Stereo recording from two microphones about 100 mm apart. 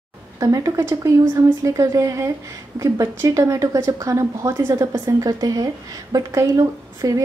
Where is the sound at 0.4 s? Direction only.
35° right (ahead or behind).